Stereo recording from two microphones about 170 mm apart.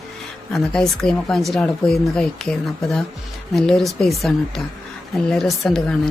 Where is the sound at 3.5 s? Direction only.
Centre (ahead or behind).